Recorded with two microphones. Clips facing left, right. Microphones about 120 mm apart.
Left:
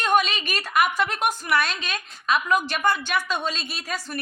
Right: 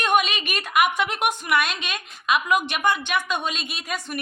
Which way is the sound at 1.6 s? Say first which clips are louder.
Right 1 dB; 35° left (ahead or behind).